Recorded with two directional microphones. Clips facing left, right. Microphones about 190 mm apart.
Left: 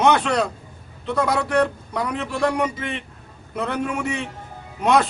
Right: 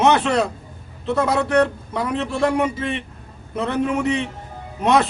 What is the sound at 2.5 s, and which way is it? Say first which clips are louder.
A man's voice: right 3 dB; 5° right (ahead or behind).